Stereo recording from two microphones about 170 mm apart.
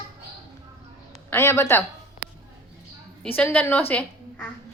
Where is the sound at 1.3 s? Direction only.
15° left (ahead or behind).